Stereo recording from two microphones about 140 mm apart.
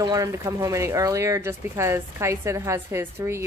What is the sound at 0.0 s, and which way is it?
Speech, 25° right (ahead or behind).